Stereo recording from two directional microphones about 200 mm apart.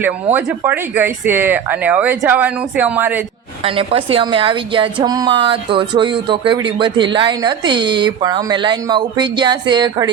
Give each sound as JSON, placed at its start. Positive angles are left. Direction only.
{"t": 0.0, "sound": "speech", "side_deg": -10}
{"t": 3.6, "sound": "a woman's voice", "side_deg": -25}